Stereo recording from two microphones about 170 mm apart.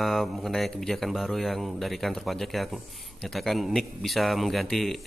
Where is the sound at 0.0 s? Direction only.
Centre (ahead or behind).